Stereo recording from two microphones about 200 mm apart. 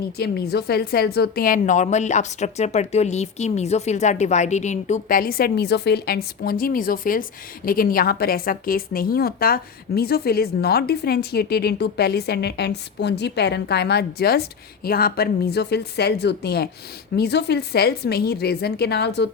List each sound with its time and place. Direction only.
0.2 s a woman's voice: 50° left (ahead or behind)